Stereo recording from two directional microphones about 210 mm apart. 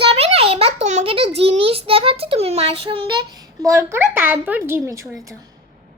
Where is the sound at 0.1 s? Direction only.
30° right (ahead or behind).